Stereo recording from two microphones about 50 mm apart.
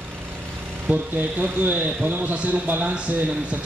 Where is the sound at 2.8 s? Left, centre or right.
Right.